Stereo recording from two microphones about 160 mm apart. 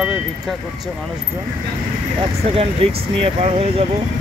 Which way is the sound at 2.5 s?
40° right (ahead or behind).